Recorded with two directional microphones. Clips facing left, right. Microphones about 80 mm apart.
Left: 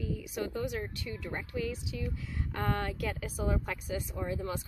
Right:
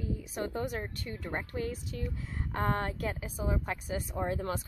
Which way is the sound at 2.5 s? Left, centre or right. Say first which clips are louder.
Right 2 dB; right.